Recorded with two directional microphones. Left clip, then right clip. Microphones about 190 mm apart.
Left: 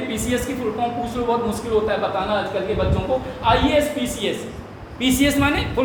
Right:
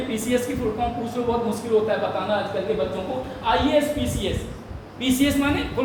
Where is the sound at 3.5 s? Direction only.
25° left (ahead or behind).